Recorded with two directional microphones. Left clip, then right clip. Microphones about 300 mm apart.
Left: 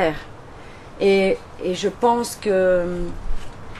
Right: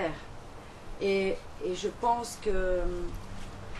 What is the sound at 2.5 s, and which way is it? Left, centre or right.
Speech, left.